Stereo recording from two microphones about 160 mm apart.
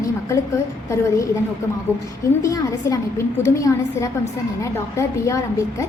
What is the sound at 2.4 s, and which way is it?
A woman's voice, 20° left (ahead or behind).